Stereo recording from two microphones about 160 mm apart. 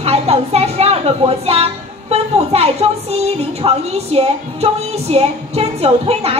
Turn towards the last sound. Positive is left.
turn(degrees=-40)  # may be behind; listen again after turning